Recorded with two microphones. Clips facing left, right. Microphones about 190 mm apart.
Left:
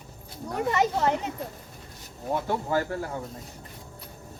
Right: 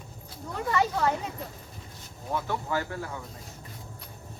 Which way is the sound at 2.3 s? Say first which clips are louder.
Left 3 dB; 40° left (ahead or behind).